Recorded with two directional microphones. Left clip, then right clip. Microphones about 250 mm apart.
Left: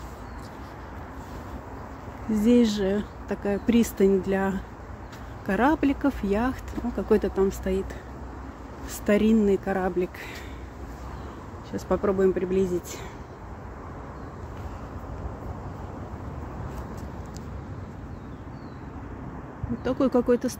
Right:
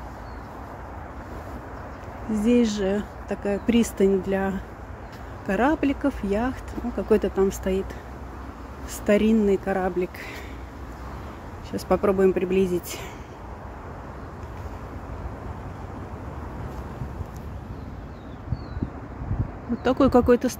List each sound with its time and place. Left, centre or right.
2.3 s speech: centre
9.0 s speech: centre
11.7 s speech: centre
19.8 s speech: centre